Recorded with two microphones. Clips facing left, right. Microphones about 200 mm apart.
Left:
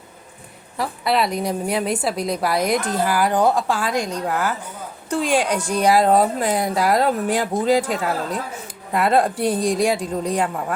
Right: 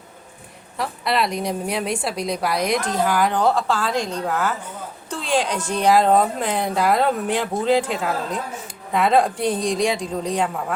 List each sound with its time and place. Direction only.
0.8 s a woman's voice: centre (ahead or behind)
8.9 s a woman's voice: 5° left (ahead or behind)